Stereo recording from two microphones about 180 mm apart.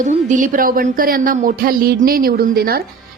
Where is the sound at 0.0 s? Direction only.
45° right (ahead or behind).